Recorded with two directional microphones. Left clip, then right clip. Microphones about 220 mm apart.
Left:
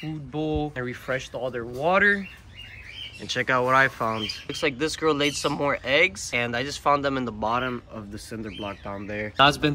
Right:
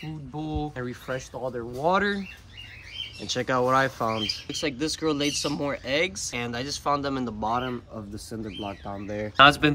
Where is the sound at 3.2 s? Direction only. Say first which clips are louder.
Left 2 dB; 15° right (ahead or behind).